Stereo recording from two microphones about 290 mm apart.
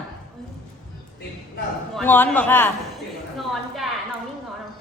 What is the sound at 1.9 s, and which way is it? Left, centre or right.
A man's voice, centre.